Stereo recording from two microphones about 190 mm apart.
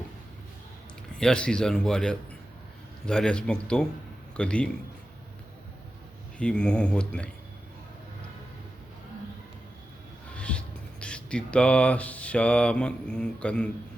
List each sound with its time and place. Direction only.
1.1 s speech: 5° left (ahead or behind)
6.4 s speech: 5° left (ahead or behind)
10.3 s a sound: 5° left (ahead or behind)
11.0 s speech: 5° left (ahead or behind)